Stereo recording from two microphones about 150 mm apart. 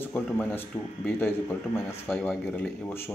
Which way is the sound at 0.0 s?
10° left (ahead or behind).